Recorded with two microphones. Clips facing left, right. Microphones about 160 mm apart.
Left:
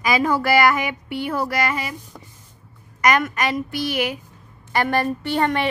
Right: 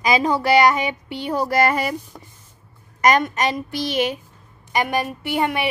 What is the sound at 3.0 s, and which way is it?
A woman's voice, 25° right (ahead or behind).